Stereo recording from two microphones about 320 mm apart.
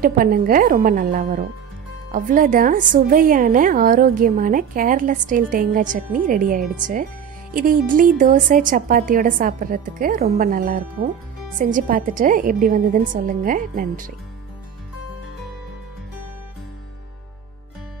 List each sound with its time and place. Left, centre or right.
0.0 s a woman's voice: right